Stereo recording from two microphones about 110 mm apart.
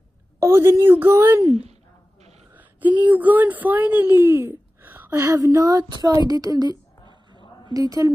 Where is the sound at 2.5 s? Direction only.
15° right (ahead or behind).